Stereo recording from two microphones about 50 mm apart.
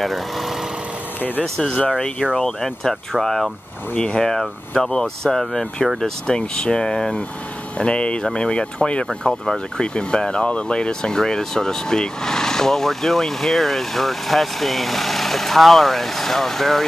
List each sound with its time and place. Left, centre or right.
0.0 s speech: centre
2.0 s speech: left
2.3 s speech: centre